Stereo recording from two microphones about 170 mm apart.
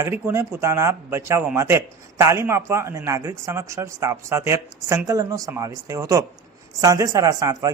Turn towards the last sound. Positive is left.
turn(degrees=-20)  # may be behind; listen again after turning